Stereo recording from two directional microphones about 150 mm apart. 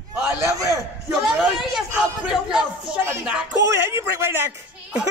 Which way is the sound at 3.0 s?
20° right (ahead or behind).